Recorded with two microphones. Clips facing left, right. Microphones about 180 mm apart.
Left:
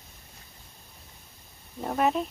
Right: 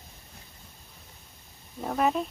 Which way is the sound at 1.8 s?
Centre (ahead or behind).